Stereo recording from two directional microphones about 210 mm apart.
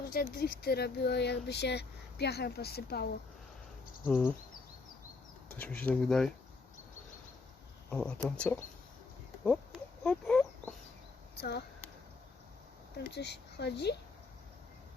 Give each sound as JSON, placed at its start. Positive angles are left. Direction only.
{"t": 0.1, "sound": "speech", "side_deg": 45}
{"t": 4.0, "sound": "speech", "side_deg": 0}
{"t": 5.5, "sound": "speech", "side_deg": 5}
{"t": 7.9, "sound": "speech", "side_deg": 5}
{"t": 10.0, "sound": "chicken", "side_deg": 5}
{"t": 11.3, "sound": "speech", "side_deg": 50}
{"t": 13.0, "sound": "speech", "side_deg": 55}